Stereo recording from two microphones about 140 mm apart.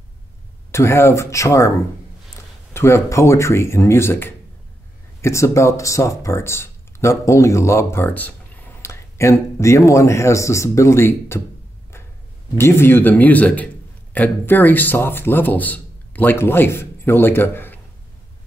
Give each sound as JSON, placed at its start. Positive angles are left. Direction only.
{"t": 0.7, "sound": "speech", "side_deg": 20}
{"t": 2.7, "sound": "speech", "side_deg": 20}
{"t": 12.5, "sound": "speech", "side_deg": 15}